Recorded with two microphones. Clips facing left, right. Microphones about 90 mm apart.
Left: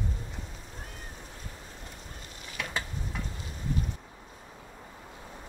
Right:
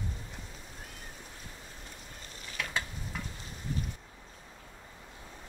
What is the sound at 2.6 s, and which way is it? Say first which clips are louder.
Stir: left 1 dB; 5° left (ahead or behind).